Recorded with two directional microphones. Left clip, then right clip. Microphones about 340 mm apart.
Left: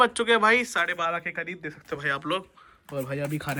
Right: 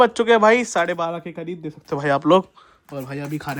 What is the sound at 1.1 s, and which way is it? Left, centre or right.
Speech, centre.